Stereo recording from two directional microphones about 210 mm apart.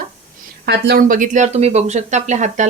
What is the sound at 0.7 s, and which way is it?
A woman's voice, 45° right (ahead or behind).